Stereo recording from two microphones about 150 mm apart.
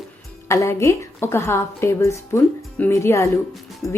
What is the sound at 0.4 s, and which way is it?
A woman's voice, 20° left (ahead or behind).